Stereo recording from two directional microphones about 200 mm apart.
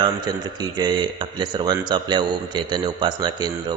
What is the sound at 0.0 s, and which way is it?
A man's voice, 20° right (ahead or behind).